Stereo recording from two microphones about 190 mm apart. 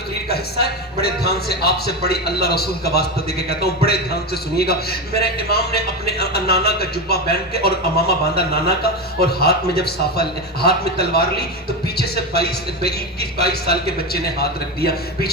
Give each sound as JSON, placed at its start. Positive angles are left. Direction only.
{"t": 0.3, "sound": "a man's voice", "side_deg": 55}